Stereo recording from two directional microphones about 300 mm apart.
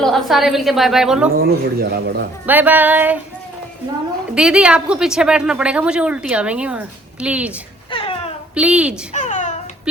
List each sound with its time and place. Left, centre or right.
0.0 s a woman's voice: centre
1.5 s speech: right
2.5 s a woman's voice: centre
4.4 s a woman's voice: centre
7.9 s cat: centre
8.5 s a woman's voice: centre
9.1 s babbling: left